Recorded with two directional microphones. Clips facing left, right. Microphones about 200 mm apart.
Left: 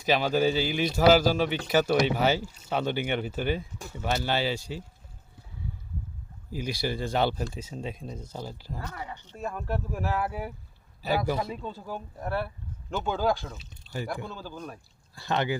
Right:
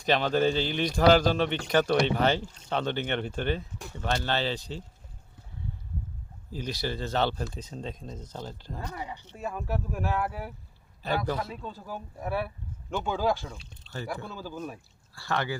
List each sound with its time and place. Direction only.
0.0 s speech: 5° left (ahead or behind)
6.5 s speech: 10° left (ahead or behind)
8.8 s speech: 15° right (ahead or behind); by 11.6 s 10° left (ahead or behind)
11.6 s speech: centre (ahead or behind)
14.3 s speech: 5° right (ahead or behind)
15.1 s speech: 20° left (ahead or behind)